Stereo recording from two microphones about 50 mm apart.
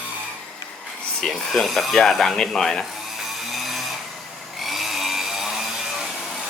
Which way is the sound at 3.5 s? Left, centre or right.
Centre.